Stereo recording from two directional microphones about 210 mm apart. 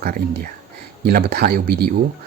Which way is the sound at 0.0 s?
40° right (ahead or behind).